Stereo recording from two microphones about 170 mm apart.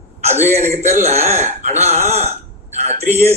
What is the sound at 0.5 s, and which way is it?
Speech, 40° right (ahead or behind).